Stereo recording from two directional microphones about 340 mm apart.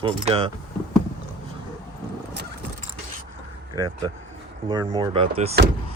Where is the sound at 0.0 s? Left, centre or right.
Centre.